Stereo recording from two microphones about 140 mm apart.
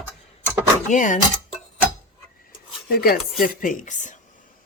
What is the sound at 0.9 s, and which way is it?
Speech, 65° left (ahead or behind).